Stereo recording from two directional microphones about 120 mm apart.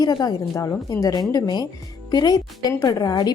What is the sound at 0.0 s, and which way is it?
Speech, 35° left (ahead or behind).